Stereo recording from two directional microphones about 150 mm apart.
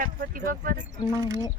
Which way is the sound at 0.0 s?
70° right (ahead or behind).